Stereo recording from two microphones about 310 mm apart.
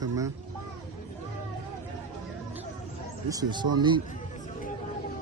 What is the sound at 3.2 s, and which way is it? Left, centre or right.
Speech, centre.